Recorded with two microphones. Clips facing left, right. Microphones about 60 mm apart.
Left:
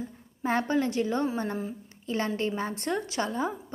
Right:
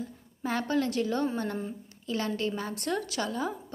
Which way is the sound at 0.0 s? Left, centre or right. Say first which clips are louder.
Left 3 dB; left.